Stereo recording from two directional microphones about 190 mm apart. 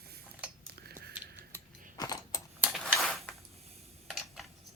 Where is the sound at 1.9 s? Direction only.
20° left (ahead or behind).